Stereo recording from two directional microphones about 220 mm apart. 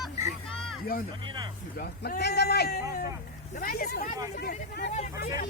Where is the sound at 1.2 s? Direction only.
20° right (ahead or behind).